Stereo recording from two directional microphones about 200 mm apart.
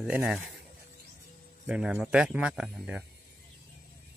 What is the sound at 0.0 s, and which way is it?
Speech, 5° right (ahead or behind).